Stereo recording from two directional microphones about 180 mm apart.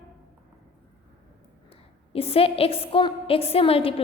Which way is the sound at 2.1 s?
35° left (ahead or behind).